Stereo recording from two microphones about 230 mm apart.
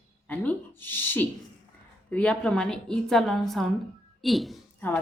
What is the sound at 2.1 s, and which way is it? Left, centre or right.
Speech, centre.